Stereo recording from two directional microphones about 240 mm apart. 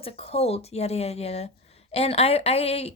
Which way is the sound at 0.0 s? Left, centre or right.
Left.